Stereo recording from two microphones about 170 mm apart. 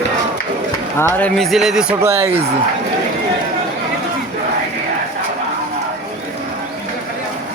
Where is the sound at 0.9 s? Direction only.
15° left (ahead or behind); by 2.0 s 5° right (ahead or behind).